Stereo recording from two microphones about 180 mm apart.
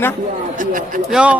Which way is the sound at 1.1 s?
5° right (ahead or behind).